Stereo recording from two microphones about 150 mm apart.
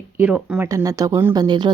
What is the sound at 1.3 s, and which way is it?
Speech, 30° right (ahead or behind).